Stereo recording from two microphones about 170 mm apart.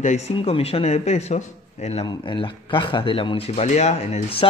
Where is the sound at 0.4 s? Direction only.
35° left (ahead or behind).